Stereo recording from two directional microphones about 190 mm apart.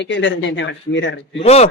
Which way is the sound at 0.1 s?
70° left (ahead or behind).